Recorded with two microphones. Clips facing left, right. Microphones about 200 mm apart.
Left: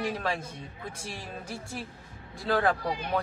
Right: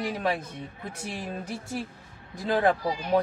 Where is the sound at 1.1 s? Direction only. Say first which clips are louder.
Right 5 dB; 20° right (ahead or behind).